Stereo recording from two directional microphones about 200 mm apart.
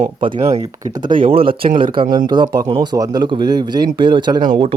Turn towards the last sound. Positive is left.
turn(degrees=-25)  # may be behind; listen again after turning